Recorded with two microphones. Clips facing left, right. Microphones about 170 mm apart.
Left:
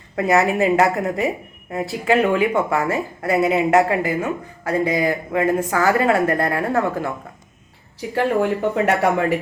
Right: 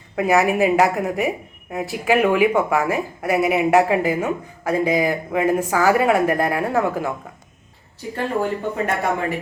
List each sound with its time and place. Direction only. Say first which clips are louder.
0.2 s speech: even; 10° right (ahead or behind)
0.9 s speech: left 1 dB; centre (ahead or behind)
8.1 s speech: left 4 dB; 70° left (ahead or behind)